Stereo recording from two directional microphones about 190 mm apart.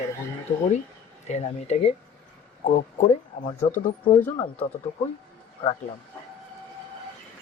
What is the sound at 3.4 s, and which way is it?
Speech, 40° left (ahead or behind).